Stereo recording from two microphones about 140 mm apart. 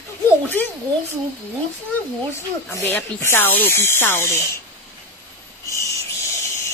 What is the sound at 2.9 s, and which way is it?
Speech, 15° left (ahead or behind).